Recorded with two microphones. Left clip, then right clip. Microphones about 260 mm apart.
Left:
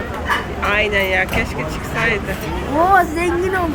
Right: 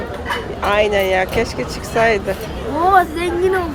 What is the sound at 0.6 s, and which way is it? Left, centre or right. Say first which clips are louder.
Speech: right 3 dB; centre.